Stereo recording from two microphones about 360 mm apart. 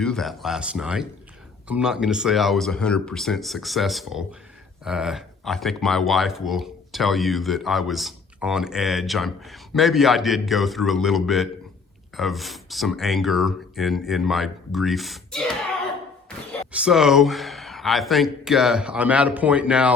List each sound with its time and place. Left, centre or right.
0.0 s speech: centre